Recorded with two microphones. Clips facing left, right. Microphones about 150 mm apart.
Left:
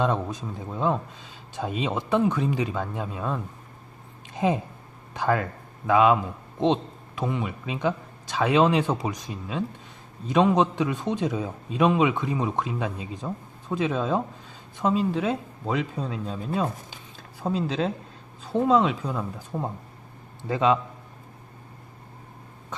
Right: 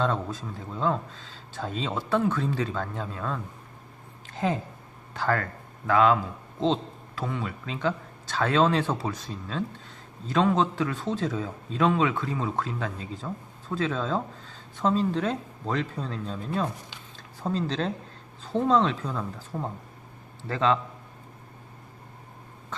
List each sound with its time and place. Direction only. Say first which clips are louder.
0.0 s a man's voice: left 2 dB; 15° left (ahead or behind)
4.3 s a sound: left 3 dB; 15° left (ahead or behind)
5.1 s a man's voice: left 3 dB; 15° left (ahead or behind)